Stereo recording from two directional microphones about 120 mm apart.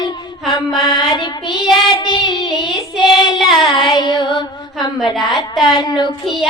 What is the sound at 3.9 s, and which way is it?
Music, 40° left (ahead or behind).